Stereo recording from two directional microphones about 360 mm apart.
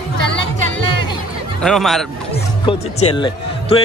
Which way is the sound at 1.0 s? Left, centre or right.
Centre.